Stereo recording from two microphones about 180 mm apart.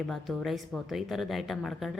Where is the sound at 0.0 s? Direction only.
Centre (ahead or behind).